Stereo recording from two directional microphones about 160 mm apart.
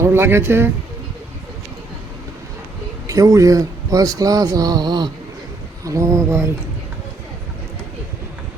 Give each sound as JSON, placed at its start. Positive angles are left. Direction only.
{"t": 0.0, "sound": "speech", "side_deg": -15}
{"t": 3.1, "sound": "speech", "side_deg": -20}